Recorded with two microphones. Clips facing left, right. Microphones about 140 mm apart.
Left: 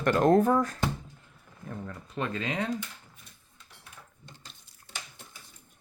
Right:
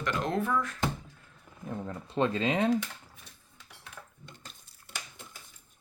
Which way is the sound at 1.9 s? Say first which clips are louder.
Right 5 dB; 30° right (ahead or behind).